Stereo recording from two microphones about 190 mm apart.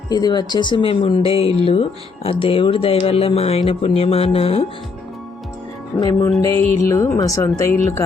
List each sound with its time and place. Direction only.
0.1 s speech: 20° left (ahead or behind)
6.0 s speech: 15° left (ahead or behind)